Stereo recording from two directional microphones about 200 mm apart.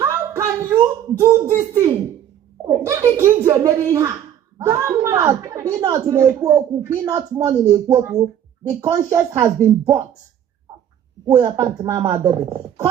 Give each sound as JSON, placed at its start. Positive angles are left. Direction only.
{"t": 0.0, "sound": "a sound", "side_deg": -15}
{"t": 1.2, "sound": "a woman's voice", "side_deg": -15}
{"t": 7.7, "sound": "speech", "side_deg": -30}
{"t": 8.8, "sound": "a woman's voice", "side_deg": -15}
{"t": 11.3, "sound": "a woman's voice", "side_deg": -15}